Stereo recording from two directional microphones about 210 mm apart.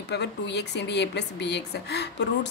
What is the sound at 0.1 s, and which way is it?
Speech, 55° left (ahead or behind).